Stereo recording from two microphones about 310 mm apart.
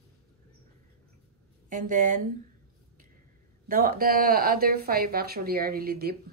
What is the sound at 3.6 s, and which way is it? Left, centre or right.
Speech, right.